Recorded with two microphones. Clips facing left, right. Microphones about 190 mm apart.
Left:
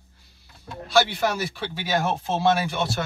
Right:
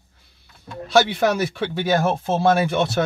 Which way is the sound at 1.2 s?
55° right (ahead or behind).